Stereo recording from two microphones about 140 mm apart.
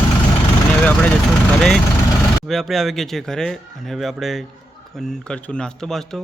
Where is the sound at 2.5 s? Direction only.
Centre (ahead or behind).